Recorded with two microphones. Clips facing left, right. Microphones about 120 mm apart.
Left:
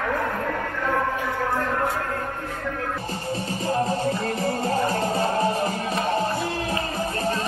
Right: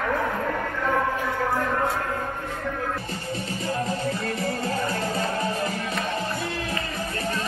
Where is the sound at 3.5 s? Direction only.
30° left (ahead or behind).